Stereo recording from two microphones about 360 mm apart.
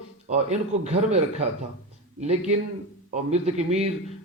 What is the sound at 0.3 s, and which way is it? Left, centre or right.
A man's voice, centre.